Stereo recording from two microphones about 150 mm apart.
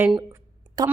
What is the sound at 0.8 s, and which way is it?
Speech, 25° right (ahead or behind).